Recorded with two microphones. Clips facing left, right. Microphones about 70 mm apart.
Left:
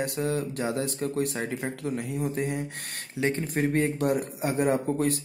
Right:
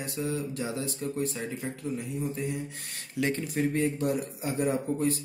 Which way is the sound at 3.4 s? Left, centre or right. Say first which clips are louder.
Left 2 dB; left.